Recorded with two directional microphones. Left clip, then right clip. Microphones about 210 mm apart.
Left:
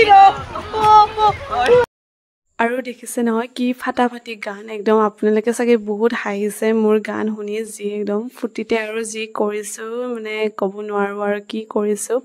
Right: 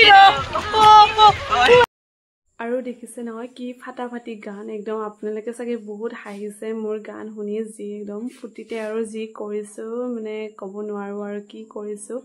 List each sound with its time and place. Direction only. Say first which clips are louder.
0.3 s rowboat: right 2 dB; 15° right (ahead or behind)
1.3 s a sound: even; 15° right (ahead or behind)
2.5 s speech: left 6 dB; 50° left (ahead or behind)